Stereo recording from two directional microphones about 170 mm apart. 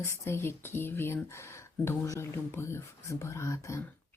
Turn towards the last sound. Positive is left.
turn(degrees=15)  # may be behind; listen again after turning